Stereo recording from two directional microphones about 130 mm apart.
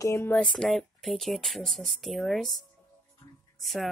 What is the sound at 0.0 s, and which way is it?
Speech, 20° left (ahead or behind).